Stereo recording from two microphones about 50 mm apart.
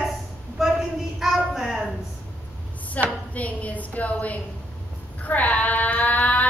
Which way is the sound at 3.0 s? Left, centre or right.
Left.